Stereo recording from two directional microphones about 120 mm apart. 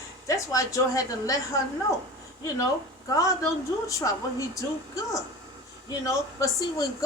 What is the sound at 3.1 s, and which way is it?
A woman's voice, 25° left (ahead or behind).